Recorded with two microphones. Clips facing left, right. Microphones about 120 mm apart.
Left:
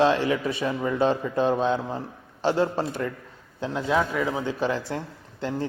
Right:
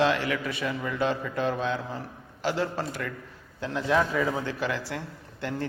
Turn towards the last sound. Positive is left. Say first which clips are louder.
# left 3 dB
turn(degrees=15)  # may be behind; listen again after turning